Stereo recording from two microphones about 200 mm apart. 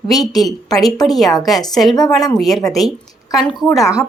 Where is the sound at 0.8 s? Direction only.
Centre (ahead or behind).